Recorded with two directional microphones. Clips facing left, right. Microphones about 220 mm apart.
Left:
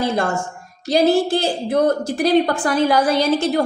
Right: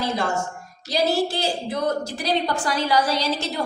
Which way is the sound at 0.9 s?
55° left (ahead or behind).